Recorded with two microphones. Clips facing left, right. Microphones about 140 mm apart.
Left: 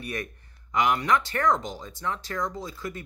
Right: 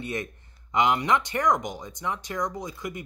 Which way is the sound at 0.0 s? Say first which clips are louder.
Right 2 dB; 20° right (ahead or behind).